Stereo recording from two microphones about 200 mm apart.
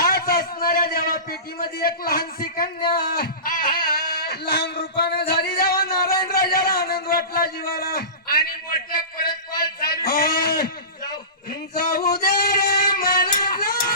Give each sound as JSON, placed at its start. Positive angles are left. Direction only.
{"t": 0.0, "sound": "a sound", "side_deg": 45}
{"t": 2.0, "sound": "speech", "side_deg": 45}
{"t": 11.7, "sound": "singing", "side_deg": 50}
{"t": 13.4, "sound": "music", "side_deg": 50}